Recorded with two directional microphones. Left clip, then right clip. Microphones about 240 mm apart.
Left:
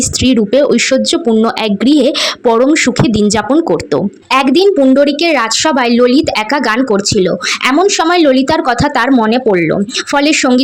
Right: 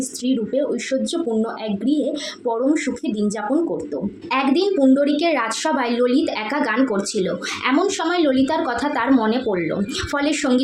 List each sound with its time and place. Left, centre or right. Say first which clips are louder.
0.3 s a woman's voice: left 11 dB; left